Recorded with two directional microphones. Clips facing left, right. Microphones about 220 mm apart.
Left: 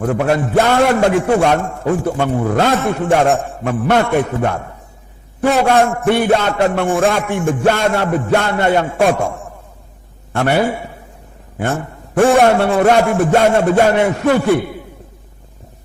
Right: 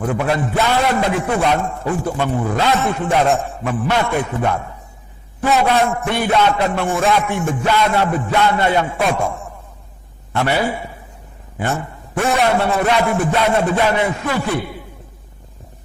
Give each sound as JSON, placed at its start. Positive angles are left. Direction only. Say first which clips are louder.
{"t": 0.0, "sound": "a man's voice", "louder": "left 3 dB", "side_deg": 45}